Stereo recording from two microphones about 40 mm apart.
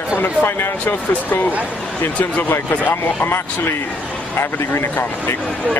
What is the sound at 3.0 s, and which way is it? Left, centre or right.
Speech, left.